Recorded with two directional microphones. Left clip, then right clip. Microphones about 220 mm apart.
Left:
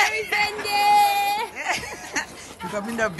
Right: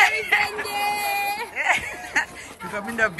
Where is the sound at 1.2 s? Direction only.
45° left (ahead or behind).